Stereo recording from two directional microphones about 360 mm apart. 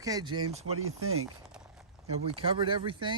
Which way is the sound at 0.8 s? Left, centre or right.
Right.